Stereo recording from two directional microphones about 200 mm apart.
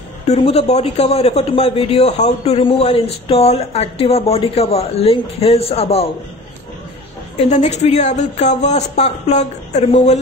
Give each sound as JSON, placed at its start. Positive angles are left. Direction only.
{"t": 0.3, "sound": "a man's voice", "side_deg": 30}
{"t": 7.3, "sound": "speech", "side_deg": 35}